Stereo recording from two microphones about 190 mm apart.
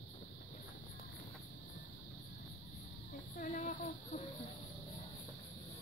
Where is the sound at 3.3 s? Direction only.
45° left (ahead or behind).